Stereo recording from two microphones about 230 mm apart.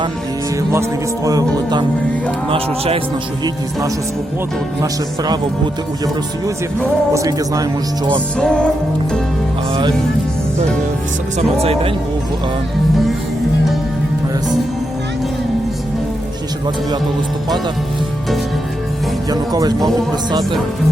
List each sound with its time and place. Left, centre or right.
0.7 s speech: centre
3.4 s speech: centre
7.1 s speech: centre
8.4 s music: centre
11.6 s speech: right
19.3 s speech: centre